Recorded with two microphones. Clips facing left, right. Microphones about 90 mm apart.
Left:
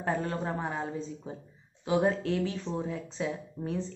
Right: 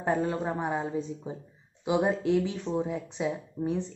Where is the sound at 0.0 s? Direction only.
15° right (ahead or behind).